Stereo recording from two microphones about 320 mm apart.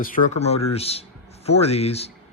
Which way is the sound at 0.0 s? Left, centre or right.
Left.